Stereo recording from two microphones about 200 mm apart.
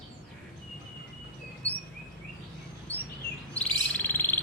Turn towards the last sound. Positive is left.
turn(degrees=10)  # may be behind; listen again after turning